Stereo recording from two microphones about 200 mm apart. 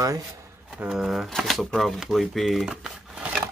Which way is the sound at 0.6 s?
5° right (ahead or behind).